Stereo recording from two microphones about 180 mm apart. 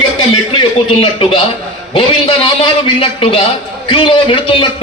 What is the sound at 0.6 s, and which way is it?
A man's voice, 30° left (ahead or behind).